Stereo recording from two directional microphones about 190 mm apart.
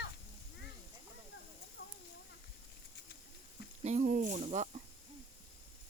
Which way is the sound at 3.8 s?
40° right (ahead or behind).